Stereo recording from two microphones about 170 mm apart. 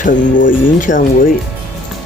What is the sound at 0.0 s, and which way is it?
Speech, 50° left (ahead or behind).